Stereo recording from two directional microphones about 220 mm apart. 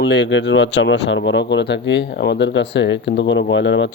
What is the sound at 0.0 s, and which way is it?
Speech, 55° left (ahead or behind).